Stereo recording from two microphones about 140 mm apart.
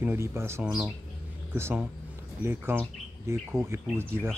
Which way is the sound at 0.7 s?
5° right (ahead or behind).